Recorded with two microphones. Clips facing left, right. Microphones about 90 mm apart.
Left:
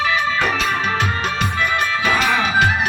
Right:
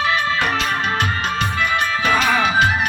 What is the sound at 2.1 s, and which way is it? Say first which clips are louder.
Music: right 1 dB; 45° right (ahead or behind).